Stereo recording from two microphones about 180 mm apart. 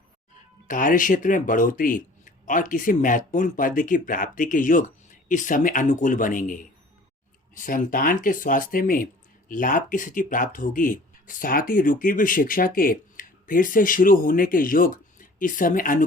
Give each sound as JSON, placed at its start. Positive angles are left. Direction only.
{"t": 0.7, "sound": "speech", "side_deg": 50}